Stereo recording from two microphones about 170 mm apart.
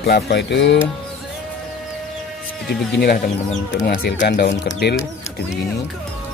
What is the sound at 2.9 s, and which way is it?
Speech, 70° left (ahead or behind).